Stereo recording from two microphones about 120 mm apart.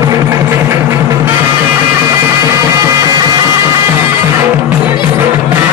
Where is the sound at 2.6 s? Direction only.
30° right (ahead or behind).